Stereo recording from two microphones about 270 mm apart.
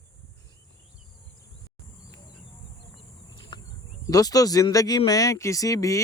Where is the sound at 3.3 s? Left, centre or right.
Centre.